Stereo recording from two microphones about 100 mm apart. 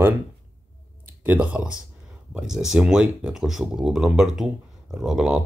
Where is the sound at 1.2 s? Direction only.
15° right (ahead or behind).